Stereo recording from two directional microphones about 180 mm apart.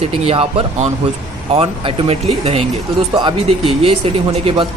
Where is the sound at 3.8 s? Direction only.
35° right (ahead or behind).